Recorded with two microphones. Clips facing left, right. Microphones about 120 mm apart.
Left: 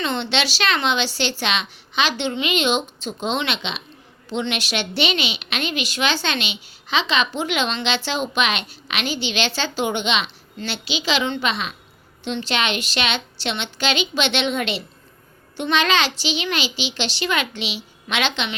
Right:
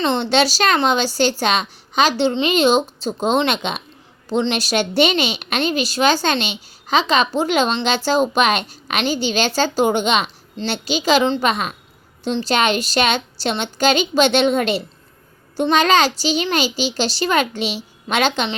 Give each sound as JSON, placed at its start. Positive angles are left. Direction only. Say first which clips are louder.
{"t": 0.0, "sound": "a woman's voice", "louder": "right 6 dB", "side_deg": -40}